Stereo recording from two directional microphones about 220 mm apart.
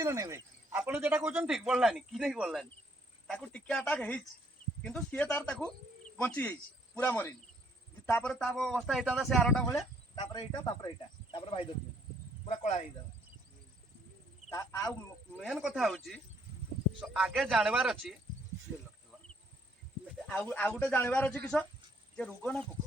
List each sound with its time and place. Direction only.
0.0 s speech: 15° right (ahead or behind); by 9.8 s 5° left (ahead or behind)
10.2 s speech: 20° left (ahead or behind)
14.5 s speech: 15° left (ahead or behind)
15.4 s speech: centre (ahead or behind)
20.2 s speech: 5° left (ahead or behind)